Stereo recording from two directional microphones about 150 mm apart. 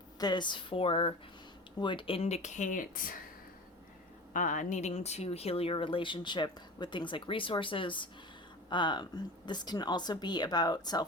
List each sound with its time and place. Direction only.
0.2 s speech: 30° left (ahead or behind); by 3.2 s 70° left (ahead or behind)
4.4 s speech: 60° left (ahead or behind); by 11.0 s 25° left (ahead or behind)